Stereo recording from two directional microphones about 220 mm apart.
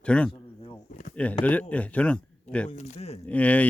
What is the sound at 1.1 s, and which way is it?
Speech, 5° left (ahead or behind).